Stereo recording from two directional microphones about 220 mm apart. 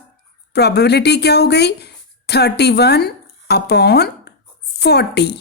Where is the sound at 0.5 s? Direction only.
50° left (ahead or behind).